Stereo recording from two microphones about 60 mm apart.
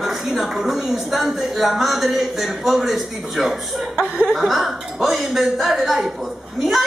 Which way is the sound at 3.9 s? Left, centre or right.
Centre.